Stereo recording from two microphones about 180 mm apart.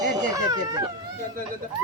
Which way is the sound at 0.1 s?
20° right (ahead or behind).